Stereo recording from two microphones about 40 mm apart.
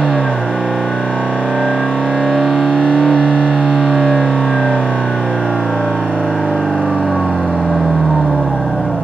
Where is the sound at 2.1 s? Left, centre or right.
Centre.